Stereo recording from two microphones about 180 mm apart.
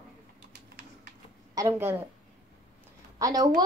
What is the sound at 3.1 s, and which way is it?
Speech, 20° right (ahead or behind).